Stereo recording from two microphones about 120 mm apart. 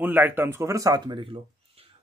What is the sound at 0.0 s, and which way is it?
Speech, 15° right (ahead or behind).